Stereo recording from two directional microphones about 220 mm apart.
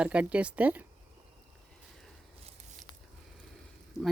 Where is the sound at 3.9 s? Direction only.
15° left (ahead or behind).